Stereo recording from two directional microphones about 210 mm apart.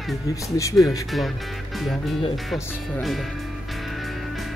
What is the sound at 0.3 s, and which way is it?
Speech, 15° left (ahead or behind).